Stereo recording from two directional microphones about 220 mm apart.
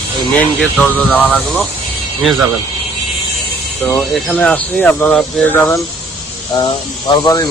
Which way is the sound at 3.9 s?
5° left (ahead or behind).